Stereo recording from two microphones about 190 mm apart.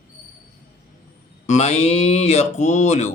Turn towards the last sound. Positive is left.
turn(degrees=40)  # may be behind; listen again after turning